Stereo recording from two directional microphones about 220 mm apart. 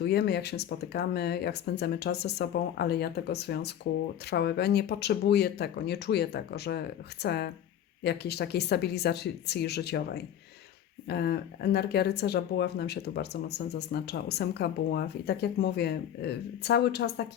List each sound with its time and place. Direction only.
0.0 s speech: 50° left (ahead or behind)
11.1 s speech: 50° left (ahead or behind)